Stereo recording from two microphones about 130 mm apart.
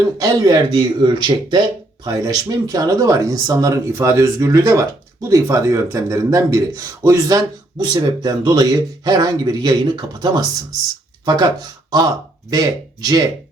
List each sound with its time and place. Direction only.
0.2 s a man's voice: 30° right (ahead or behind)
11.9 s speech: 30° right (ahead or behind)